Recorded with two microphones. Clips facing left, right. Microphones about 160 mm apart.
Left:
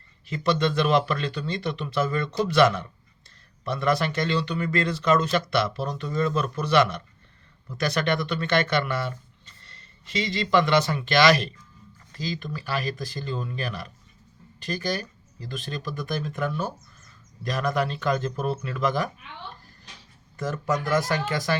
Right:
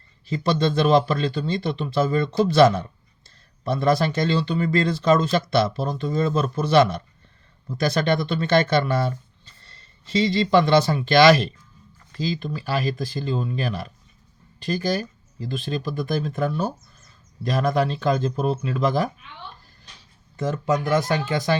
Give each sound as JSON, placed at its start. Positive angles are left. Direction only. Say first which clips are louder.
{"t": 0.3, "sound": "speech", "louder": "right 2 dB", "side_deg": -30}
{"t": 20.3, "sound": "speech", "louder": "right 4 dB", "side_deg": -25}